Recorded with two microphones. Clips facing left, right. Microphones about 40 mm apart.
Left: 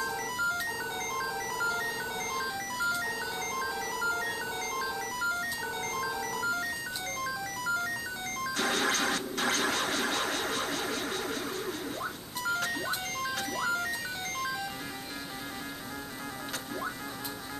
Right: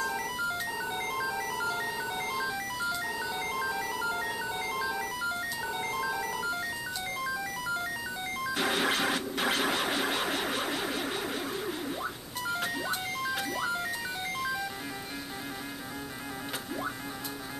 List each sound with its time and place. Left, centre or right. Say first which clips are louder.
0.0 s music: even; centre